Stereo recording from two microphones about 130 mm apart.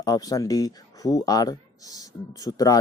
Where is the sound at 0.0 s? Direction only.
30° left (ahead or behind).